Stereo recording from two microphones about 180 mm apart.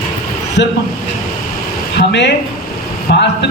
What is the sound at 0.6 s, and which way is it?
Speech, 80° left.